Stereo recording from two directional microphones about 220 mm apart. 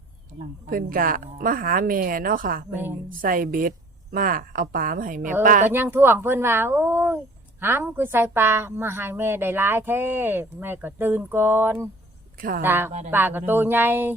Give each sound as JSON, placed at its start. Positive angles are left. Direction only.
{"t": 0.7, "sound": "a woman's voice", "side_deg": -40}
{"t": 5.7, "sound": "a woman's voice", "side_deg": -10}
{"t": 12.4, "sound": "a woman's voice", "side_deg": -40}
{"t": 12.6, "sound": "a woman's voice", "side_deg": -10}